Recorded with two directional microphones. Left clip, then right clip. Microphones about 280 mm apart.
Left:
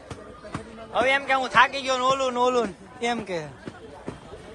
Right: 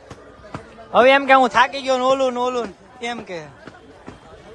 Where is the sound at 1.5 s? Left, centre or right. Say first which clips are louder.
Right 3 dB; centre.